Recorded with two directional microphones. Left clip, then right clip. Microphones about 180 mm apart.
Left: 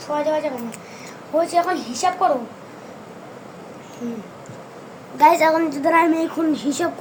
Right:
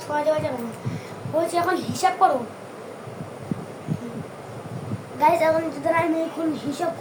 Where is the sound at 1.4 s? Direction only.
5° left (ahead or behind).